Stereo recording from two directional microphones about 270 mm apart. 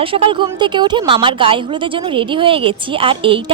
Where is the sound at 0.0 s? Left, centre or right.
Centre.